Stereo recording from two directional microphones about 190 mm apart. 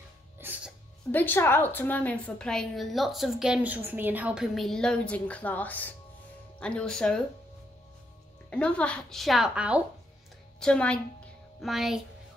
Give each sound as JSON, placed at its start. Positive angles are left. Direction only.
{"t": 0.4, "sound": "music", "side_deg": -10}
{"t": 1.1, "sound": "a woman's voice", "side_deg": 10}
{"t": 8.5, "sound": "a woman's voice", "side_deg": 5}